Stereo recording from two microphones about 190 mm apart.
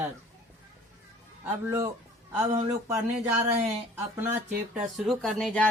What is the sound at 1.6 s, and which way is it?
Speech, 15° right (ahead or behind).